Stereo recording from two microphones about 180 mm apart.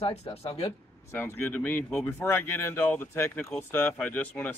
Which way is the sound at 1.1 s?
10° left (ahead or behind).